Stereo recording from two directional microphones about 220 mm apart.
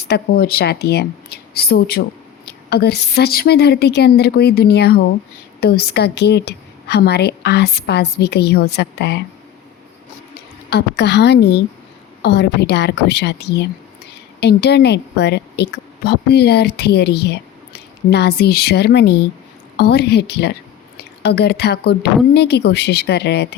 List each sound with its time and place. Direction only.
0.0 s speech: 45° left (ahead or behind)
10.3 s a woman's voice: 50° left (ahead or behind)